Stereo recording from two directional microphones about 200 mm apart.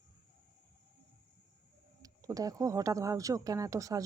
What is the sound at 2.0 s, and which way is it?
Speech, 15° right (ahead or behind).